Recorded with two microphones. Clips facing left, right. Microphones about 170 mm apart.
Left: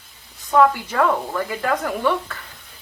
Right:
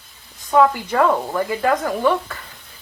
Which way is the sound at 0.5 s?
10° right (ahead or behind).